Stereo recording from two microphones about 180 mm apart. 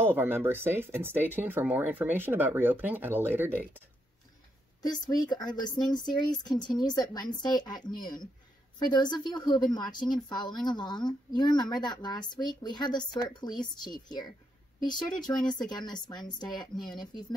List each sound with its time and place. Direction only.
0.0 s speech: 10° right (ahead or behind)
4.8 s speech: 20° left (ahead or behind)